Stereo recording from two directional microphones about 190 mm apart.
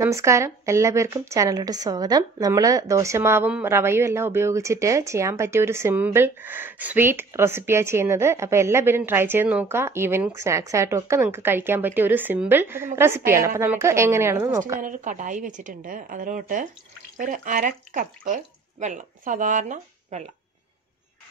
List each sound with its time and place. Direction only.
0.0 s speech: 15° right (ahead or behind)
14.8 s a woman's voice: 45° right (ahead or behind)